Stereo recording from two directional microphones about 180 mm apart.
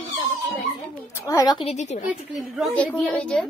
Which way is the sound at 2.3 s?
5° left (ahead or behind).